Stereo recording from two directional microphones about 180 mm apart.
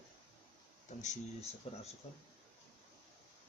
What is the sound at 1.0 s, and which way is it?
Speech, 40° left (ahead or behind).